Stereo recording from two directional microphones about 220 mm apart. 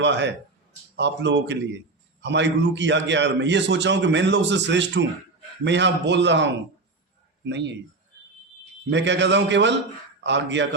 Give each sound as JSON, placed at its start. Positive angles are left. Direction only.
{"t": 0.0, "sound": "a man's voice", "side_deg": -55}
{"t": 8.9, "sound": "a man's voice", "side_deg": -55}